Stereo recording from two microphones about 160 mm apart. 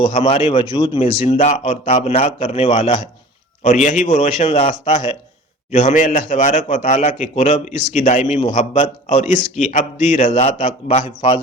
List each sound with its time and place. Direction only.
0.1 s a man's voice: 35° left (ahead or behind)
3.6 s a man's voice: 50° left (ahead or behind)
5.7 s a man's voice: 50° left (ahead or behind)